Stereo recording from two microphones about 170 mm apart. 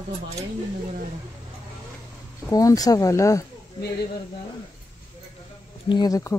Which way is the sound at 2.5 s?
20° left (ahead or behind).